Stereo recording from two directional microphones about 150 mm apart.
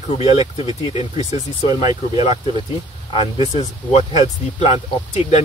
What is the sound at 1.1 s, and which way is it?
Speech, 25° right (ahead or behind).